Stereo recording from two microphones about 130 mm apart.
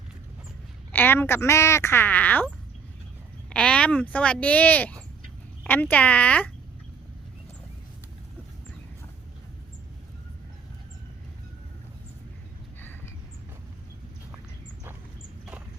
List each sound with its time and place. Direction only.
0.9 s a woman's voice: 15° left (ahead or behind)
3.5 s a woman's voice: 10° left (ahead or behind)